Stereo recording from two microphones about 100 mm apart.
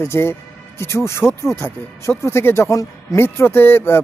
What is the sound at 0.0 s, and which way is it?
Speech, 25° left (ahead or behind).